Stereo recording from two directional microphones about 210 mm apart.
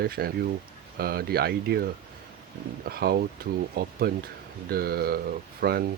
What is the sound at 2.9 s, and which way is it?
Speech, 45° right (ahead or behind).